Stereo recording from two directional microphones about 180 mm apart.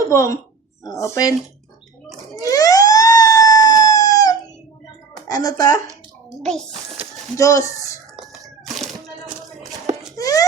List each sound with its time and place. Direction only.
0.1 s speech: 15° left (ahead or behind)
2.4 s emergency vehicle: 20° left (ahead or behind)
5.3 s speech: 20° left (ahead or behind)
6.4 s a child's voice: 5° left (ahead or behind)
7.3 s speech: 15° left (ahead or behind)
10.2 s a sound: 20° left (ahead or behind)